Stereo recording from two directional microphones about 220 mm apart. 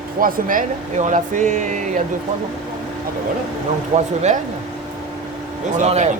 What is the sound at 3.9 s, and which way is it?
Speech, 25° right (ahead or behind).